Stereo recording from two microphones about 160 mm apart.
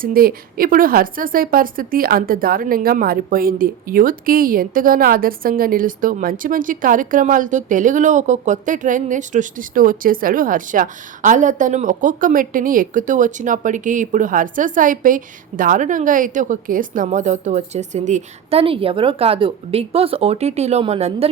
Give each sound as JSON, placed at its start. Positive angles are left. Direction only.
{"t": 0.0, "sound": "speech", "side_deg": -65}
{"t": 18.6, "sound": "speech", "side_deg": -35}